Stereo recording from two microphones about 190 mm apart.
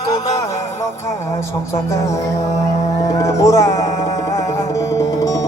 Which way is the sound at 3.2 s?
15° left (ahead or behind).